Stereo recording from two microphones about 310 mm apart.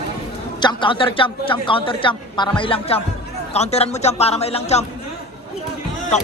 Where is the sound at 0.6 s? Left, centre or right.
Centre.